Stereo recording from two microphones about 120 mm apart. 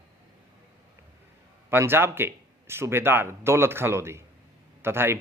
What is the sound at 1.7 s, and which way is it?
A man's voice, 20° right (ahead or behind).